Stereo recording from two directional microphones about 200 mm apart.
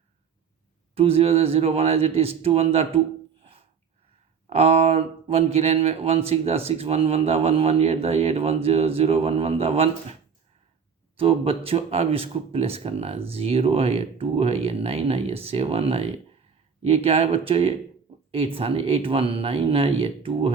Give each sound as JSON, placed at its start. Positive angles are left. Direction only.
{"t": 0.9, "sound": "speech", "side_deg": -30}
{"t": 4.4, "sound": "speech", "side_deg": -30}
{"t": 11.2, "sound": "speech", "side_deg": -30}